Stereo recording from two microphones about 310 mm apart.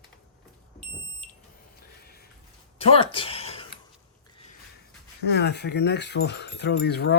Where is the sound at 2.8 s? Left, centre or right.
Centre.